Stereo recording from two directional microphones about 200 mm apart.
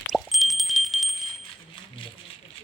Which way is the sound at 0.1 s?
Centre (ahead or behind).